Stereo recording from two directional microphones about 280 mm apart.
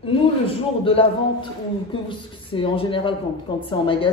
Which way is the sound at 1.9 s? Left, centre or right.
Centre.